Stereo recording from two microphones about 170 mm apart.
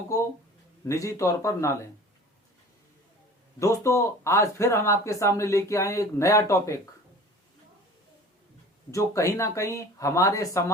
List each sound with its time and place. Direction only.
0.9 s speech: 20° left (ahead or behind)
3.6 s speech: 20° left (ahead or behind)
8.9 s speech: 20° left (ahead or behind)